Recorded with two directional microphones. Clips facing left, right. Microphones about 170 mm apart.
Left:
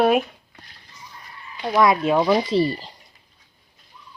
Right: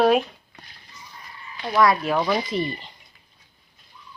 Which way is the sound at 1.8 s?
20° left (ahead or behind).